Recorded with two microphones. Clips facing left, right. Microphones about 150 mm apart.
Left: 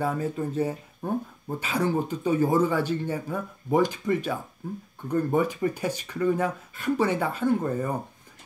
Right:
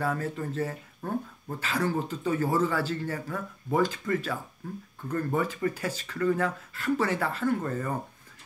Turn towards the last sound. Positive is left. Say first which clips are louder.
# left 3 dB
turn(degrees=15)  # may be behind; listen again after turning